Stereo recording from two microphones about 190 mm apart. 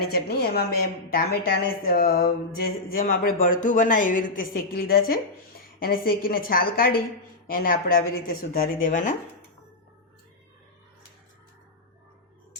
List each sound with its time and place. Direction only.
0.1 s a woman's voice: 55° left (ahead or behind)